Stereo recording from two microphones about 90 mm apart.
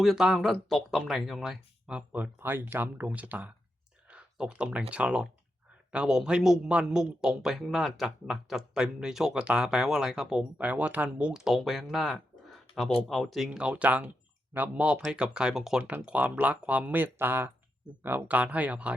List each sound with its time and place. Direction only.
0.0 s speech: centre (ahead or behind)
2.4 s speech: 25° right (ahead or behind)
4.1 s a sound: 10° right (ahead or behind)
4.9 s speech: 15° right (ahead or behind)
10.6 s speech: 15° right (ahead or behind)
15.8 s speech: 20° right (ahead or behind)